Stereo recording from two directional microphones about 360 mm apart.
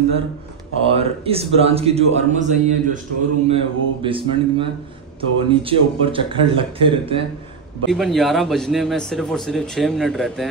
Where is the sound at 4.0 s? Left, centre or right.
Centre.